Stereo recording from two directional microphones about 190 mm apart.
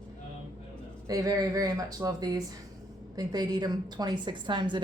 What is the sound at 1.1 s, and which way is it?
A woman's voice, 20° right (ahead or behind).